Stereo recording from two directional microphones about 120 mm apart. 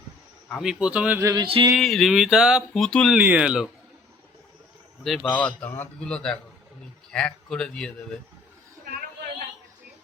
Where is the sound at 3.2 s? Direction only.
10° right (ahead or behind).